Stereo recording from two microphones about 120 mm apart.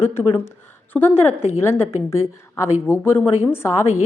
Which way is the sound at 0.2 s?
20° left (ahead or behind).